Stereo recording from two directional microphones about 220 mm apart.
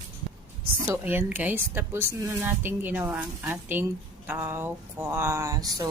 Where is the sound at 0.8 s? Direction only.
10° right (ahead or behind).